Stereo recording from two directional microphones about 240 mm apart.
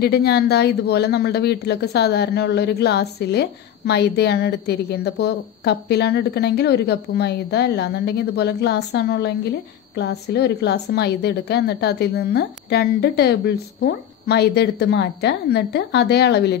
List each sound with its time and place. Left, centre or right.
0.0 s speech: left